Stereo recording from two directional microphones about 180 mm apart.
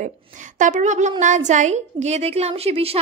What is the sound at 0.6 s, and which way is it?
A woman's voice, 45° right (ahead or behind).